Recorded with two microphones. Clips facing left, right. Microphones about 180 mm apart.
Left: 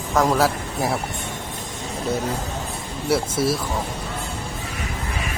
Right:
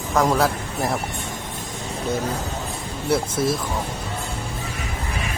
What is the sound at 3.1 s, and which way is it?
Speech, 5° left (ahead or behind).